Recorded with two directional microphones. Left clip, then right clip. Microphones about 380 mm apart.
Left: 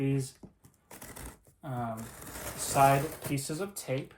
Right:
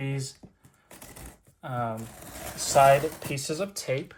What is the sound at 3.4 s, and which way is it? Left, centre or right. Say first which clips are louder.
Speech: right 6 dB; right.